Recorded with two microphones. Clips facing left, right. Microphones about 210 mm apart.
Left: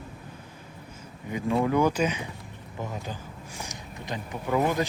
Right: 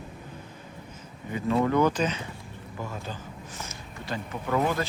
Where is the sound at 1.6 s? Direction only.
10° left (ahead or behind).